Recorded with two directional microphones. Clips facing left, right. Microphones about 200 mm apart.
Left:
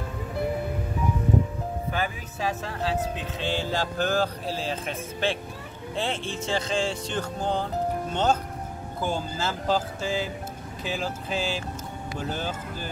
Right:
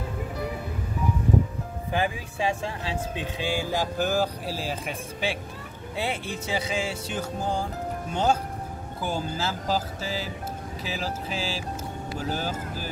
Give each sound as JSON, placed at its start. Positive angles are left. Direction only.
{"t": 1.9, "sound": "music", "side_deg": -15}
{"t": 3.3, "sound": "speech", "side_deg": -10}